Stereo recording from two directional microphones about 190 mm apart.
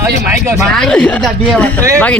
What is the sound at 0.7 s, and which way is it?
Speech, 5° left (ahead or behind).